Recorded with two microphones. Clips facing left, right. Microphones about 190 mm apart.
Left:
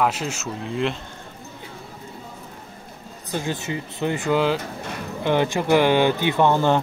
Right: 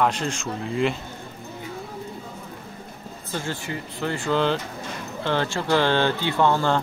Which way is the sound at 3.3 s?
15° left (ahead or behind).